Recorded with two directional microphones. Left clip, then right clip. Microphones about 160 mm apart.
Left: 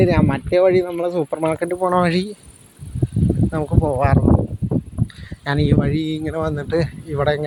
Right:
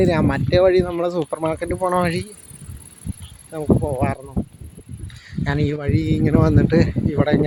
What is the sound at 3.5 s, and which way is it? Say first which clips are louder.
Speech: right 2 dB; 25° left (ahead or behind).